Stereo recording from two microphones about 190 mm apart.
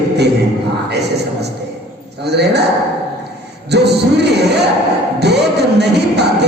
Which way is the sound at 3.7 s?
60° right (ahead or behind).